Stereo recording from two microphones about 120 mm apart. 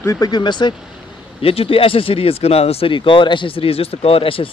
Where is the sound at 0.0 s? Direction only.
25° left (ahead or behind).